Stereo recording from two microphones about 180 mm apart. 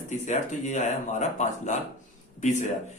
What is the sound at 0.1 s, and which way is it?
Speech, 40° left (ahead or behind).